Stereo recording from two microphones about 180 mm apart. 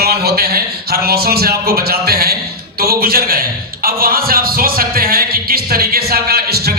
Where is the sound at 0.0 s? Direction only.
60° right (ahead or behind).